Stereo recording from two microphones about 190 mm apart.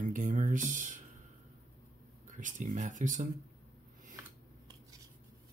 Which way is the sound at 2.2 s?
40° right (ahead or behind).